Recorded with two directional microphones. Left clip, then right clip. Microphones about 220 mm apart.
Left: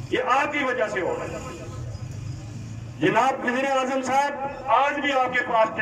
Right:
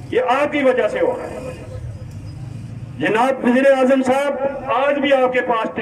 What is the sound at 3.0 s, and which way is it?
A man's voice, 50° right (ahead or behind).